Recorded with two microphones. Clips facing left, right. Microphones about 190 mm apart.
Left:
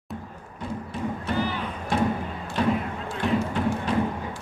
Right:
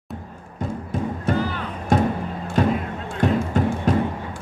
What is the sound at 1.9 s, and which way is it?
Music, 45° right (ahead or behind).